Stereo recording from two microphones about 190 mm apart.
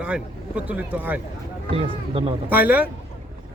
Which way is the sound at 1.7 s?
30° right (ahead or behind).